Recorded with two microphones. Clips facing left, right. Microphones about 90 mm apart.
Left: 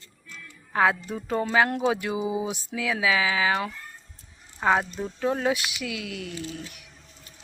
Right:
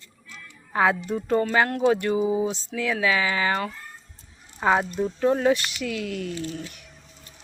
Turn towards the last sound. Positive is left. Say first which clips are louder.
# right 3 dB
turn(degrees=0)  # may be behind; listen again after turning